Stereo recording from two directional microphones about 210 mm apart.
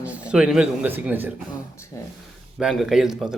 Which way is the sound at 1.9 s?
15° left (ahead or behind).